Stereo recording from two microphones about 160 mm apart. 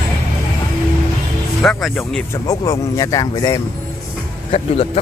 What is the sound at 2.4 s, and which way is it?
Speech, 20° left (ahead or behind).